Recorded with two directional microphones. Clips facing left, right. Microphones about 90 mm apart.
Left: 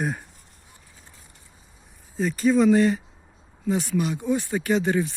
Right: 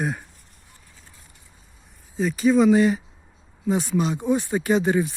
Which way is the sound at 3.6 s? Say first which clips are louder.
Right 2 dB; 20° right (ahead or behind).